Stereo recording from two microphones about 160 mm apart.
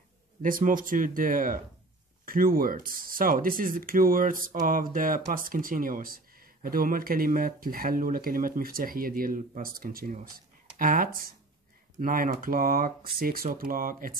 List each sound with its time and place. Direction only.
0.4 s speech: 60° right (ahead or behind)